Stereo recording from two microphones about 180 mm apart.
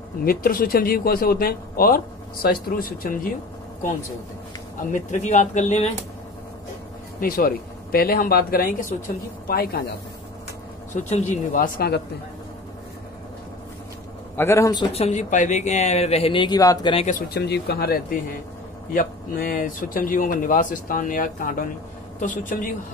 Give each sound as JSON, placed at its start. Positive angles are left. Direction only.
{"t": 0.2, "sound": "speech", "side_deg": 55}
{"t": 4.9, "sound": "speech", "side_deg": 40}
{"t": 7.2, "sound": "speech", "side_deg": 50}
{"t": 11.0, "sound": "speech", "side_deg": 40}
{"t": 11.5, "sound": "speech", "side_deg": 55}
{"t": 14.3, "sound": "a man's voice", "side_deg": 15}
{"t": 15.0, "sound": "speech", "side_deg": 40}
{"t": 16.9, "sound": "speech", "side_deg": 40}
{"t": 17.3, "sound": "speech", "side_deg": 65}